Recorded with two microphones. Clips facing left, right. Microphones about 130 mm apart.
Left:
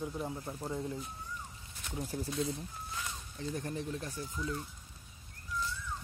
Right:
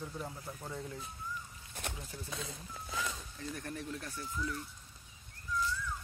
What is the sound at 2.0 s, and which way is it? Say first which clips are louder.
Speech: left 9 dB; 35° left (ahead or behind).